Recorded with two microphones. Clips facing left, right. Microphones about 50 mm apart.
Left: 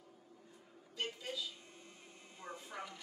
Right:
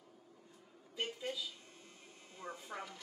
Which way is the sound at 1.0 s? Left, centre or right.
Centre.